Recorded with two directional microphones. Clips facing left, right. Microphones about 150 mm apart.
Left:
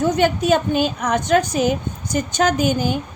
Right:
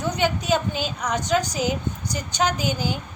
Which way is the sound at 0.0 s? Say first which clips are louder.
Left 7 dB; 50° left (ahead or behind).